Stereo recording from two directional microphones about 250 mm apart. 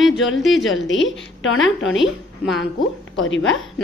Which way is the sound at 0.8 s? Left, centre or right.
Left.